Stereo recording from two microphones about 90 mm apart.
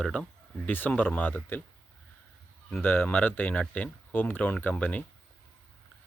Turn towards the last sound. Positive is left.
turn(degrees=15)  # may be behind; listen again after turning